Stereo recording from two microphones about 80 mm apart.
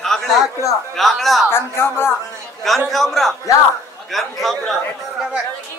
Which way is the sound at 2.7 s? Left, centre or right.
Centre.